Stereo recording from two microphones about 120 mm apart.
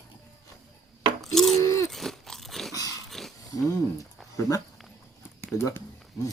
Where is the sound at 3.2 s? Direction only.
5° left (ahead or behind).